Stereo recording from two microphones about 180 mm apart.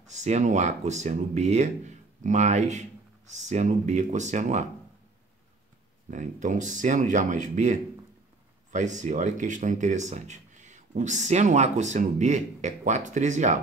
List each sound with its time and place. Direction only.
0.1 s speech: 40° right (ahead or behind)
6.0 s speech: 45° right (ahead or behind)